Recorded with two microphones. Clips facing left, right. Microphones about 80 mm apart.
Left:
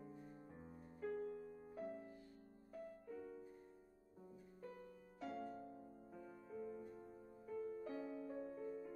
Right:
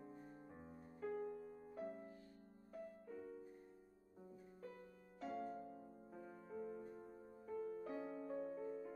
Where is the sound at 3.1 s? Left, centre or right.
Centre.